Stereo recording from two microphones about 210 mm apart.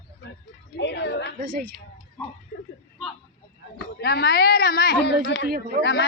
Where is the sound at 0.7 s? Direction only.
55° left (ahead or behind).